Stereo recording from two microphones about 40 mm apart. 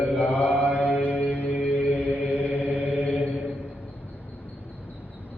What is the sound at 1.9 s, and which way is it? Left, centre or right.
Chant, right.